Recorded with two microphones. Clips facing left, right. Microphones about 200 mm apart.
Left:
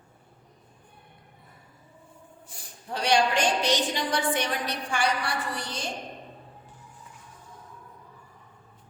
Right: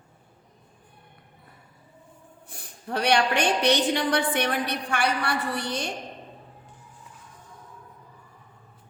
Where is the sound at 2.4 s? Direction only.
60° right (ahead or behind).